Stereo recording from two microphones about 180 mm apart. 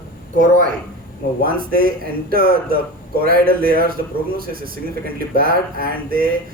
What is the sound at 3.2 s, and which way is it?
Mantra, 55° right (ahead or behind).